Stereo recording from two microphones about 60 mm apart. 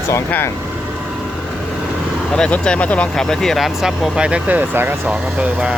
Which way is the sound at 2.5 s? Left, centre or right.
Left.